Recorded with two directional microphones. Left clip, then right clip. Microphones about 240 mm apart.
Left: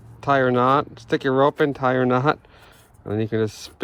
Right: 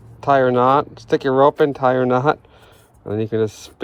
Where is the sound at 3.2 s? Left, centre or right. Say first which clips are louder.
Right 4 dB; right.